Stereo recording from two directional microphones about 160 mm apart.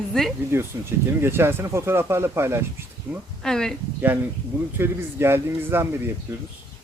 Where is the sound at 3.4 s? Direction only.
5° left (ahead or behind).